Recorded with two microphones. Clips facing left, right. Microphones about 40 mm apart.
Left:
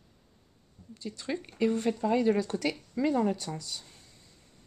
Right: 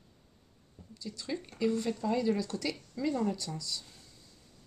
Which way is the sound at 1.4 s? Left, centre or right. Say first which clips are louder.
Left 3 dB; left.